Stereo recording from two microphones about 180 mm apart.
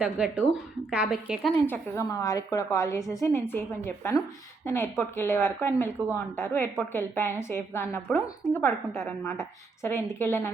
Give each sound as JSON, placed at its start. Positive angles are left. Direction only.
{"t": 0.0, "sound": "a woman's voice", "side_deg": -5}
{"t": 1.6, "sound": "a woman's voice", "side_deg": 15}